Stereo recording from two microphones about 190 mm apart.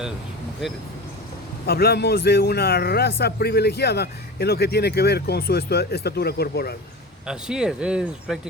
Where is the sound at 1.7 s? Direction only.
55° left (ahead or behind).